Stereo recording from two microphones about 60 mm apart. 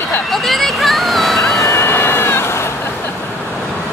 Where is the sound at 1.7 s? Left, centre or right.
Left.